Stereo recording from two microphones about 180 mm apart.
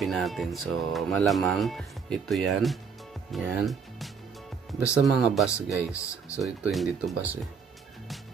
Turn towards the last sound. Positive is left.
turn(degrees=-5)  # may be behind; listen again after turning